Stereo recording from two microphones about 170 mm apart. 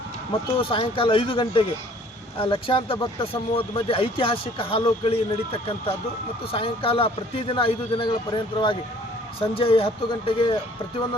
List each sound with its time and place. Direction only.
0.5 s speech: 30° left (ahead or behind)